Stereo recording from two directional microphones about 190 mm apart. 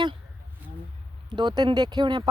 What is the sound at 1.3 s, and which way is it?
Speech, 25° right (ahead or behind).